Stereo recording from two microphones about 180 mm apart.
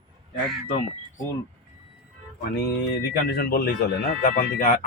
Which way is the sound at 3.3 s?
60° left (ahead or behind).